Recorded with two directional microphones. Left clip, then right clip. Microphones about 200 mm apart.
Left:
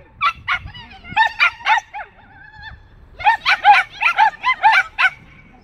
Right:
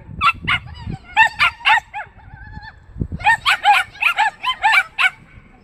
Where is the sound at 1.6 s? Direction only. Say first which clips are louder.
Right 2 dB; 40° left (ahead or behind).